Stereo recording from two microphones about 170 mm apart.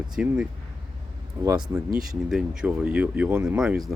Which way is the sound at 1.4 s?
20° right (ahead or behind).